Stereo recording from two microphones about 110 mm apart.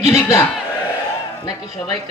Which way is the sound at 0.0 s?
30° left (ahead or behind).